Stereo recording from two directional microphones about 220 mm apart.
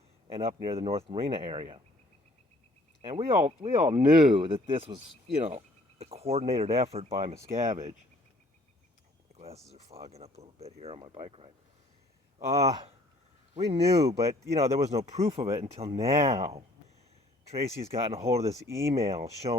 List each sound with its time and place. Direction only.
0.4 s speech: 25° right (ahead or behind)
3.1 s speech: 25° right (ahead or behind)
9.3 s a sound: 30° right (ahead or behind)
9.9 s speech: 30° right (ahead or behind)
12.5 s speech: 15° right (ahead or behind)
13.5 s speech: 30° right (ahead or behind)
17.7 s speech: 25° right (ahead or behind)
18.6 s speech: 15° right (ahead or behind)
18.9 s speech: 30° right (ahead or behind)